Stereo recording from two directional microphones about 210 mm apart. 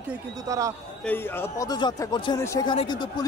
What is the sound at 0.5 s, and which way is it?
Speech, 15° right (ahead or behind).